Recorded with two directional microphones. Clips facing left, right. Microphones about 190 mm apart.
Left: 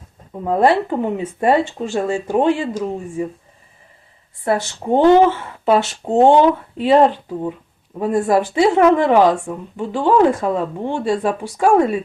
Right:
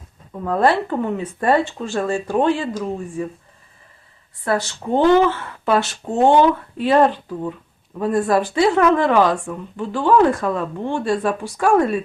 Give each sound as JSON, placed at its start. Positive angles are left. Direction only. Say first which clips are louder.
{"t": 0.4, "sound": "a woman's voice", "louder": "left 2 dB", "side_deg": 20}
{"t": 4.4, "sound": "a woman's voice", "louder": "left 3 dB", "side_deg": 25}